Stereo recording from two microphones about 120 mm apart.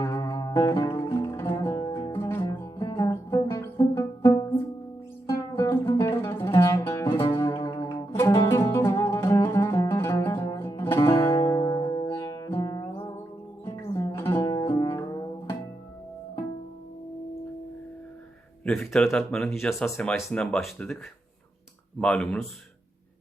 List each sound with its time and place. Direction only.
0.0 s music: 30° left (ahead or behind)
2.5 s music: 35° left (ahead or behind)
5.9 s music: 25° left (ahead or behind)
14.5 s music: 30° left (ahead or behind)
18.6 s speech: 5° left (ahead or behind)
22.0 s speech: 10° left (ahead or behind)